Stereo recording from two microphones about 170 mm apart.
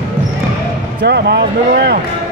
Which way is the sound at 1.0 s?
70° right (ahead or behind).